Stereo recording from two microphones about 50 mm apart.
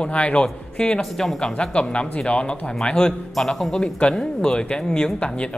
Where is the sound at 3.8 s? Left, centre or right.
Centre.